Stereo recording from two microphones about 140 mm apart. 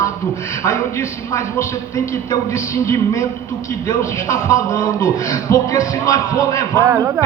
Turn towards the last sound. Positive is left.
turn(degrees=-20)  # may be behind; listen again after turning